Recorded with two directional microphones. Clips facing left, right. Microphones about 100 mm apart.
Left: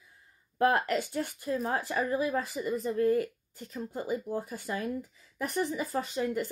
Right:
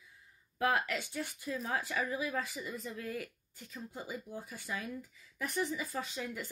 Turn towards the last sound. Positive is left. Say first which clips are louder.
# left 9 dB
turn(degrees=45)  # may be behind; listen again after turning